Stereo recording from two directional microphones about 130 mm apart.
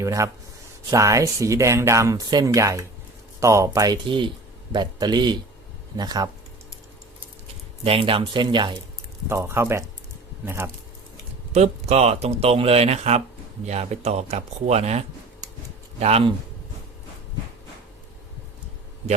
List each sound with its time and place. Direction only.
0.0 s speech: 25° right (ahead or behind)
7.9 s speech: 45° right (ahead or behind)
9.3 s speech: 20° right (ahead or behind)
11.5 s speech: 55° right (ahead or behind)